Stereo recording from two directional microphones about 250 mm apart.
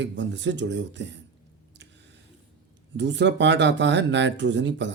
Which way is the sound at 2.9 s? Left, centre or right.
Right.